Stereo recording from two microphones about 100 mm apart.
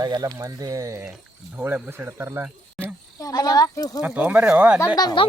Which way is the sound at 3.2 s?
40° left (ahead or behind).